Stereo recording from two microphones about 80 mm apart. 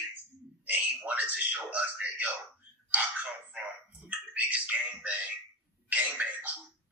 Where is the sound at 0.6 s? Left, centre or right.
Right.